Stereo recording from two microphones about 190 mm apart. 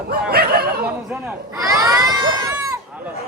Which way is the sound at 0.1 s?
55° right (ahead or behind).